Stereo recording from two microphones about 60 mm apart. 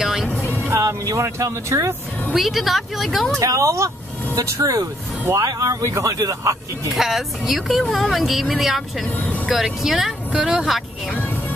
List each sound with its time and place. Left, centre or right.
0.0 s music: centre
0.7 s speech: right
2.3 s speech: centre
3.3 s speech: right
6.9 s speech: centre
9.0 s speech: left
9.5 s speech: centre